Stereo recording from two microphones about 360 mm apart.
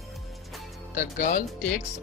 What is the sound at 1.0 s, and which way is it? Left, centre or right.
Speech, left.